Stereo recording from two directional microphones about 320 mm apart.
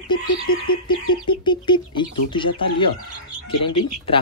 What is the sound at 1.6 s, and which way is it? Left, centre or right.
Speech, centre.